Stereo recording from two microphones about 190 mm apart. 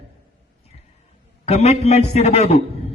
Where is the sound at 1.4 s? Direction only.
35° left (ahead or behind).